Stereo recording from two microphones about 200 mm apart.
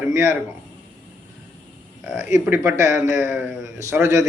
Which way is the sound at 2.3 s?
15° right (ahead or behind).